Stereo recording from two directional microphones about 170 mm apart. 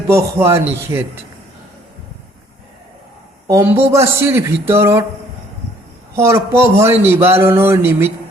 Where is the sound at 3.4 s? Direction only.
15° right (ahead or behind).